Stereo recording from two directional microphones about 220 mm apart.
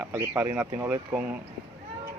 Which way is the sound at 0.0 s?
10° right (ahead or behind).